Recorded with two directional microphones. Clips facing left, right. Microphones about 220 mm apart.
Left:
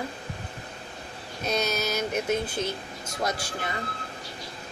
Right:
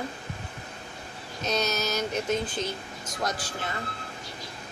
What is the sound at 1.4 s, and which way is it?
Speech, 10° left (ahead or behind).